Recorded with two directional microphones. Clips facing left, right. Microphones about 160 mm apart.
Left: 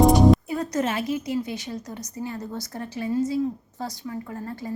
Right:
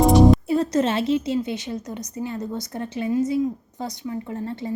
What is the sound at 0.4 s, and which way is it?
A woman's voice, 25° right (ahead or behind).